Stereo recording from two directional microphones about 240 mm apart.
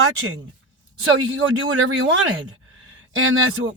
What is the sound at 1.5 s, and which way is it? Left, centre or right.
Speech, right.